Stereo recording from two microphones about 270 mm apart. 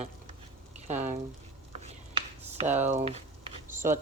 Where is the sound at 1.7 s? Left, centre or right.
Right.